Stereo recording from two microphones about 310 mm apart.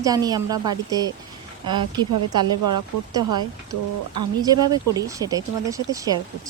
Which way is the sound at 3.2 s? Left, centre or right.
Right.